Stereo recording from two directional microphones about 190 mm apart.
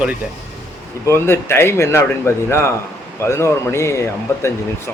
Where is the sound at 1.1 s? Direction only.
15° left (ahead or behind).